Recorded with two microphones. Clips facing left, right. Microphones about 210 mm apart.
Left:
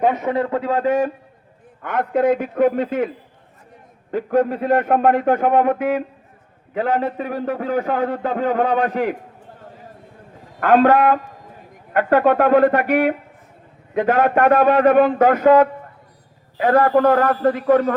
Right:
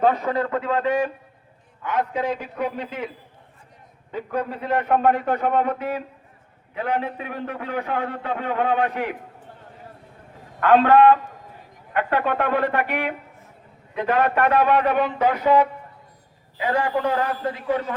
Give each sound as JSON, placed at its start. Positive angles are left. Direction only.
{"t": 0.0, "sound": "a man's voice", "side_deg": 20}
{"t": 1.8, "sound": "a man's voice", "side_deg": 55}
{"t": 4.1, "sound": "a man's voice", "side_deg": 45}
{"t": 10.6, "sound": "a man's voice", "side_deg": 45}